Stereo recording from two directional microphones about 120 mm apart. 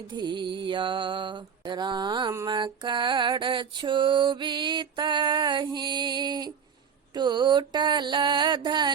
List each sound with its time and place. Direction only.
0.1 s mantra: 40° right (ahead or behind)